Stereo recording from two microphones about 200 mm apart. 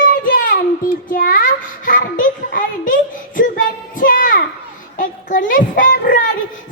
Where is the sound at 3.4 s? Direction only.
40° left (ahead or behind).